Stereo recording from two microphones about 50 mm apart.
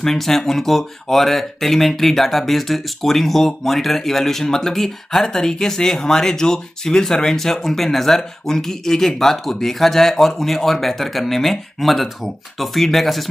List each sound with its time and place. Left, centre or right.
0.0 s speech: centre